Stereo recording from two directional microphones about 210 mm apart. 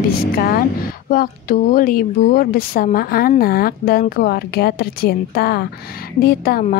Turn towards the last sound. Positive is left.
turn(degrees=45)  # may be behind; listen again after turning